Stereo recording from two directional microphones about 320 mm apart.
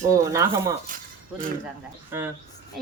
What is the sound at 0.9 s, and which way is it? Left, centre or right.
Speech, right.